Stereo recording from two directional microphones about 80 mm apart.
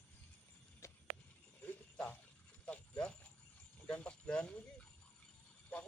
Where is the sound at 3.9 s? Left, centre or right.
Centre.